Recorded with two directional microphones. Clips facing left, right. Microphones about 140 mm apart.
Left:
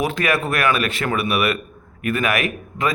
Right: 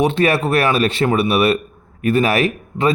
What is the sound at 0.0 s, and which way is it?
A man's voice, 30° right (ahead or behind).